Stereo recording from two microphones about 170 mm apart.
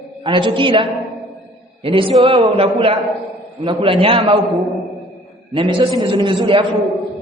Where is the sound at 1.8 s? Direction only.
30° right (ahead or behind).